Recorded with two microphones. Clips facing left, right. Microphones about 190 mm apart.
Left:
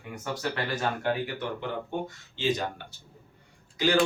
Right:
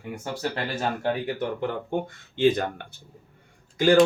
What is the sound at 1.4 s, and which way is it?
Speech, 50° right (ahead or behind).